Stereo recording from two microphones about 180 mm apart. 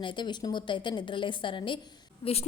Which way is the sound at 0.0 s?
25° left (ahead or behind).